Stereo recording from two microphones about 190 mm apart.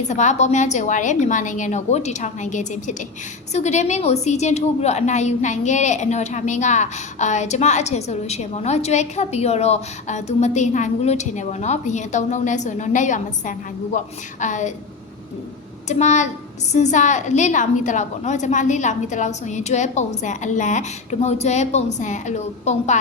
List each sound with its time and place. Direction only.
0.1 s a woman's voice: 40° left (ahead or behind)
15.9 s a woman's voice: 40° left (ahead or behind)